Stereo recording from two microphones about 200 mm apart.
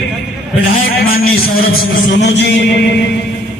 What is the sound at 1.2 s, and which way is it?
A man's voice, 50° left (ahead or behind).